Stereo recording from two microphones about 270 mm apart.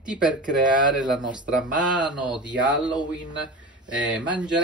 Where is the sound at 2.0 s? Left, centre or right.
Centre.